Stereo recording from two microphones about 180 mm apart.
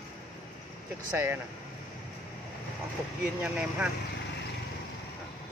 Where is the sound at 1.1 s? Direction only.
10° right (ahead or behind).